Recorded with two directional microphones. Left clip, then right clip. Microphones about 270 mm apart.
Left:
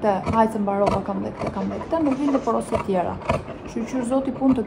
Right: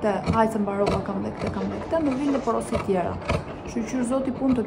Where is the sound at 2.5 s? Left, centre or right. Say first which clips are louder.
Left 2 dB; centre.